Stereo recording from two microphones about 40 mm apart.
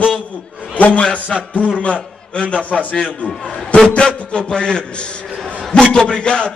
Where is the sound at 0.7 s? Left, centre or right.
Left.